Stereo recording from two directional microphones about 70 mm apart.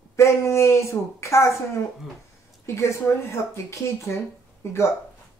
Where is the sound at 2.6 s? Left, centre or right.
Left.